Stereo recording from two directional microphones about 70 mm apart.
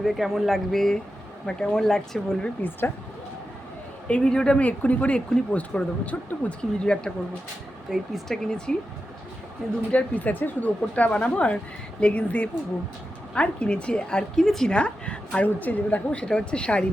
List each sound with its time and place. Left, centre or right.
0.0 s a woman's voice: centre
2.6 s speech: left
4.1 s a woman's voice: centre
7.9 s speech: centre
8.4 s a woman's voice: centre
9.9 s a woman's voice: left; by 14.7 s centre
14.7 s a woman's voice: centre